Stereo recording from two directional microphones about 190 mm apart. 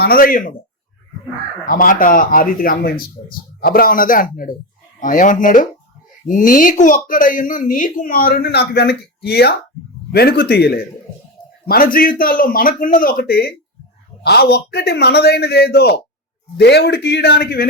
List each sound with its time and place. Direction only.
0.0 s speech: 50° left (ahead or behind)
1.6 s a man's voice: 45° left (ahead or behind)